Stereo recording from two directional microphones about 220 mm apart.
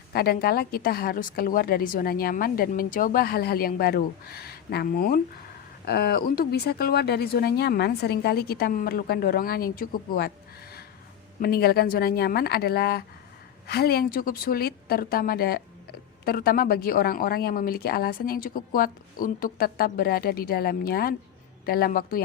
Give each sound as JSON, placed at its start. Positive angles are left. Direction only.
{"t": 0.1, "sound": "a woman's voice", "side_deg": 45}